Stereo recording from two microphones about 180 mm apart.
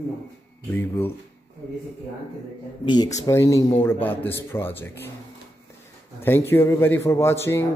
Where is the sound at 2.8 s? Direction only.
25° left (ahead or behind).